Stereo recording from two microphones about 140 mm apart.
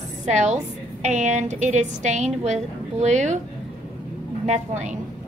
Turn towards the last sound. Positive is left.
turn(degrees=-55)  # may be behind; listen again after turning